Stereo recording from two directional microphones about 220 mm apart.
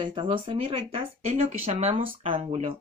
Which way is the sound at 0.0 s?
20° right (ahead or behind).